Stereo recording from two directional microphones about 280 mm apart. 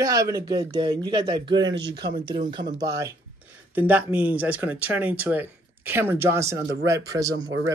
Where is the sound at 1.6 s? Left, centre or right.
Right.